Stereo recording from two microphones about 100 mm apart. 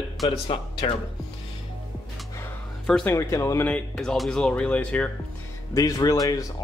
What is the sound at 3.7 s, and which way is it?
Speech, 10° left (ahead or behind).